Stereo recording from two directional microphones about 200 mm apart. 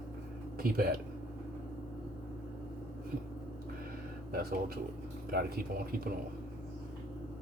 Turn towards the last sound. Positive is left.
turn(degrees=-50)  # may be behind; listen again after turning